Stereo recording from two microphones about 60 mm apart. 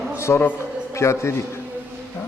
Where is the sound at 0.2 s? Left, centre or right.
Left.